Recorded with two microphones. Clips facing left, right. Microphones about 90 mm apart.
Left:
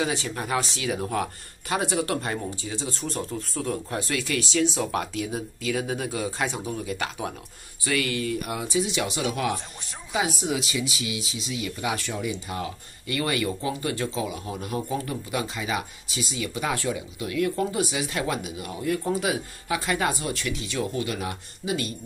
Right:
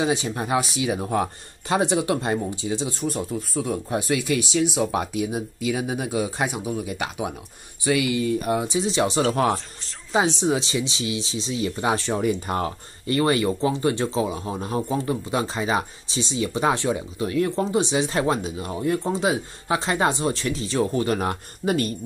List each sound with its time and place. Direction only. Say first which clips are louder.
0.0 s speech: right 4 dB; 20° right (ahead or behind)
12.2 s speech: right 7 dB; 50° right (ahead or behind)
13.0 s speech: right 6 dB; 35° right (ahead or behind)